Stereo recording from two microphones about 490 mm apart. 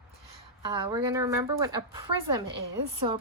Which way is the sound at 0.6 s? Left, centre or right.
Centre.